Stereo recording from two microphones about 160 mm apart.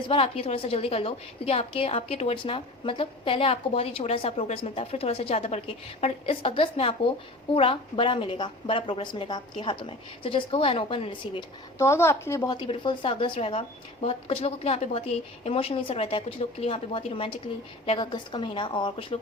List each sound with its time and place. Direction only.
0.1 s a woman's voice: 35° left (ahead or behind)
11.8 s speech: 15° left (ahead or behind)
12.5 s a woman's voice: 30° left (ahead or behind)